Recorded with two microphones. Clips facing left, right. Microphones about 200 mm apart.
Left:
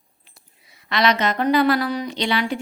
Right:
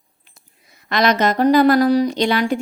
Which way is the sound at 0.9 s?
45° right (ahead or behind).